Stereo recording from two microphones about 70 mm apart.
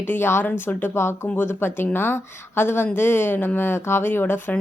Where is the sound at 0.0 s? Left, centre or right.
Left.